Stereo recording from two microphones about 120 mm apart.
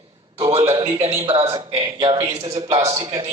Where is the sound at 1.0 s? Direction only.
50° right (ahead or behind).